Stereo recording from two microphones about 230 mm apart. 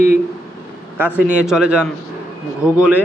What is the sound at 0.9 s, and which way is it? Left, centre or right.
A man's voice, centre.